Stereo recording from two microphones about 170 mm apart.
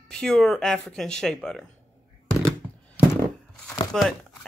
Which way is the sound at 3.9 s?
Centre (ahead or behind).